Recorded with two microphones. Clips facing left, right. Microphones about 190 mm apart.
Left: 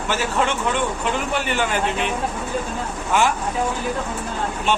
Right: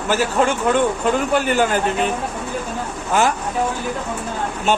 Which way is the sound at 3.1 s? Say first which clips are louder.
Right 2 dB; 40° right (ahead or behind).